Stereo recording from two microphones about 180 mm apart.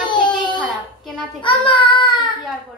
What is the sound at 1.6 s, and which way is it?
Speech, 25° left (ahead or behind).